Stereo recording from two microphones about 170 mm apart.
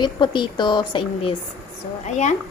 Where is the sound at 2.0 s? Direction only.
45° left (ahead or behind).